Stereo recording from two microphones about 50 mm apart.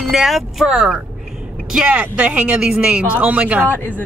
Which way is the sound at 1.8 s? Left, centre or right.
Right.